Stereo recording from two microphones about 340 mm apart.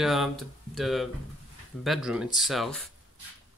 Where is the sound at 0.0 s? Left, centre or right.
Centre.